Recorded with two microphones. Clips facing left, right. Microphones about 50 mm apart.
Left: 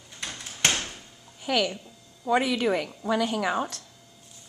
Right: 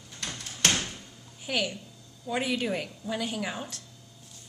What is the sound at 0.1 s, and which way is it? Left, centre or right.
Door, centre.